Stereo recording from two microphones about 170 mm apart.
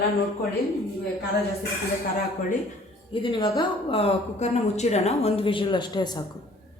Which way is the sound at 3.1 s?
30° left (ahead or behind).